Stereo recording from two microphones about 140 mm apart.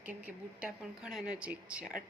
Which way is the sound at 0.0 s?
10° right (ahead or behind).